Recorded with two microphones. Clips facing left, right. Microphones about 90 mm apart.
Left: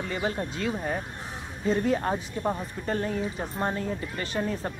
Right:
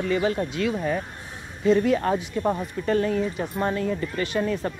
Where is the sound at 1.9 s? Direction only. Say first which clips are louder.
Right 4 dB; 35° left (ahead or behind).